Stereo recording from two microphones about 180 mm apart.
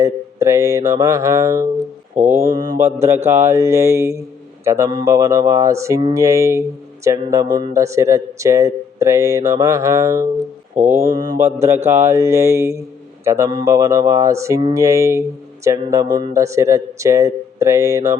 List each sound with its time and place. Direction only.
0.0 s speech: 15° right (ahead or behind)
2.1 s mantra: 40° right (ahead or behind)
2.5 s mantra: 20° right (ahead or behind)
3.1 s speech: 15° right (ahead or behind)
10.8 s mantra: 40° right (ahead or behind)
11.1 s mantra: 20° right (ahead or behind)
11.3 s speech: 15° right (ahead or behind)